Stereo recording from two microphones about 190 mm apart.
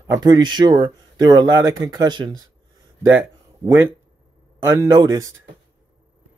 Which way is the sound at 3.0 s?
10° right (ahead or behind).